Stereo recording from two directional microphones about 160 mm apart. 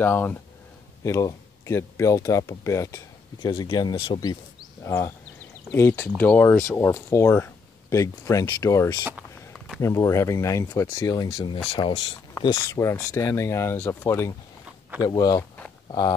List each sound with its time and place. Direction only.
0.0 s speech: 10° left (ahead or behind); by 12.0 s 30° left (ahead or behind)
12.4 s speech: 20° left (ahead or behind)